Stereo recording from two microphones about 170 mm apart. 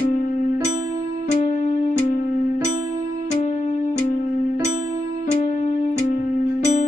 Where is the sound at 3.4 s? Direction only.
45° left (ahead or behind).